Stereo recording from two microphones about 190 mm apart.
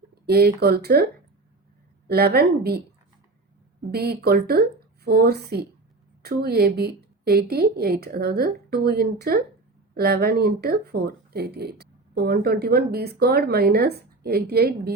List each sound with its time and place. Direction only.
0.3 s speech: 55° right (ahead or behind)
2.0 s speech: 55° right (ahead or behind)
3.9 s speech: 55° right (ahead or behind)